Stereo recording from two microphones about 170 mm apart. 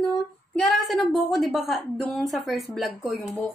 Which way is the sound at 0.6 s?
Centre (ahead or behind).